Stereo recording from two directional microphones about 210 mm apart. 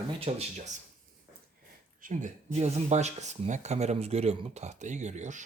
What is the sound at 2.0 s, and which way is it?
Speech, 35° right (ahead or behind).